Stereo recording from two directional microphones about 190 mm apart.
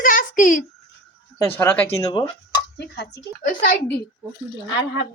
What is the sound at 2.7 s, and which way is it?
Speech, 60° left (ahead or behind).